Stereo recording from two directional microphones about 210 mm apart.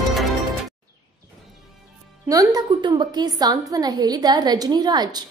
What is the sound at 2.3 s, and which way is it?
A woman's voice, 15° right (ahead or behind).